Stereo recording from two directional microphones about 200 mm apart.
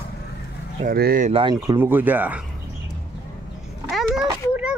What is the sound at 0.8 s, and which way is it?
Speech, 45° right (ahead or behind).